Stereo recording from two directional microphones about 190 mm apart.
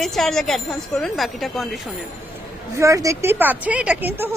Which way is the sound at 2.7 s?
15° right (ahead or behind).